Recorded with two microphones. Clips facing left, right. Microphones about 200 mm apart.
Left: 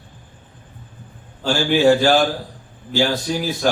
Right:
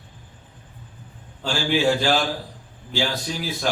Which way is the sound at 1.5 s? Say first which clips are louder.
Left 6 dB; 50° left (ahead or behind).